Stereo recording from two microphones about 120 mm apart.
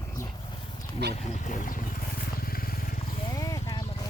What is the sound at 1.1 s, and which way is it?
Speech, 90° left.